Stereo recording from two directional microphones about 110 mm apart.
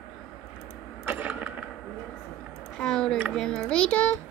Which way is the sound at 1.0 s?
15° right (ahead or behind).